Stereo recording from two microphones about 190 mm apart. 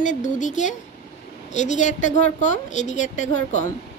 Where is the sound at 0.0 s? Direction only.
40° left (ahead or behind).